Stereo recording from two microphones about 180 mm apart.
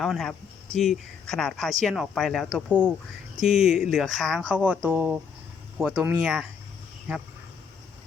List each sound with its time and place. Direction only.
0.0 s speech: centre (ahead or behind)